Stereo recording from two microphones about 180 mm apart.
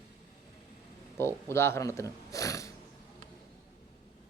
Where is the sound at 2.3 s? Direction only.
15° left (ahead or behind).